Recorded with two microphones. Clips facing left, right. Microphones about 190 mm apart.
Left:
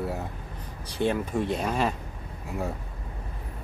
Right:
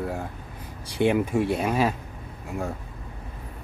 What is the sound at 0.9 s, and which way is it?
Speech, 15° right (ahead or behind).